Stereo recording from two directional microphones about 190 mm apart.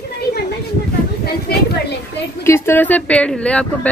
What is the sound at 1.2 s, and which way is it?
Speech, 55° left (ahead or behind).